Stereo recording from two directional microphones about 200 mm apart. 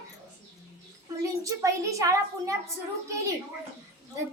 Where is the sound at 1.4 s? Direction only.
15° right (ahead or behind).